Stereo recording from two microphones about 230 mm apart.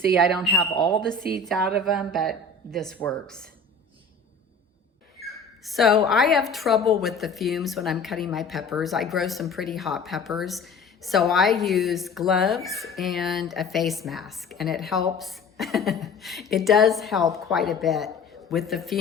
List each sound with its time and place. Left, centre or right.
0.2 s speech: centre
0.8 s a woman's voice: centre
1.3 s speech: centre
5.2 s a sound: centre
6.1 s speech: centre